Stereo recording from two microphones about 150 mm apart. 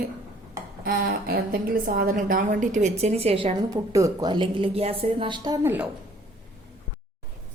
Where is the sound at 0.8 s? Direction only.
85° right; by 2.9 s 55° right (ahead or behind).